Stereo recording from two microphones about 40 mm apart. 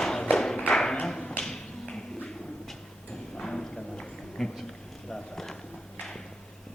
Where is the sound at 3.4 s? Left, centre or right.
Centre.